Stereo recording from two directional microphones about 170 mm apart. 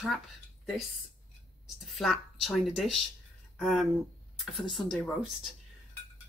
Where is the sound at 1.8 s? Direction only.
Centre (ahead or behind).